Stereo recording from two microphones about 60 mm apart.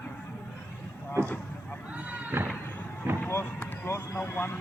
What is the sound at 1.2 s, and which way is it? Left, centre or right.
Speech, right.